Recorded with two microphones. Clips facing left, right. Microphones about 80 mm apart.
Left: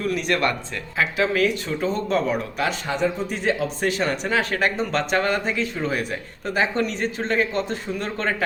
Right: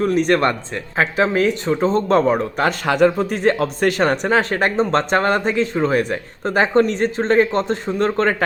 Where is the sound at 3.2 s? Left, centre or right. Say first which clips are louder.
Right 6 dB; right.